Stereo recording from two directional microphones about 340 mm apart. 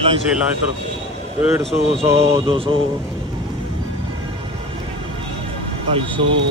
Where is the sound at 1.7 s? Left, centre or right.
Centre.